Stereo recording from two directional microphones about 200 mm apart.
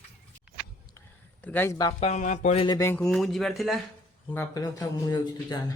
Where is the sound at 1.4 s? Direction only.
10° left (ahead or behind).